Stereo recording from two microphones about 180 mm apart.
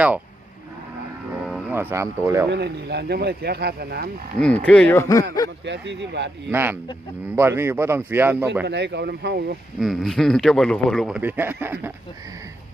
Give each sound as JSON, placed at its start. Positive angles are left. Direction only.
{"t": 1.5, "sound": "speech", "side_deg": -5}
{"t": 2.5, "sound": "speech", "side_deg": -65}
{"t": 4.4, "sound": "speech", "side_deg": 5}
{"t": 5.6, "sound": "speech", "side_deg": -80}
{"t": 6.5, "sound": "a man's voice", "side_deg": -10}
{"t": 8.6, "sound": "speech", "side_deg": -70}
{"t": 9.8, "sound": "speech", "side_deg": 0}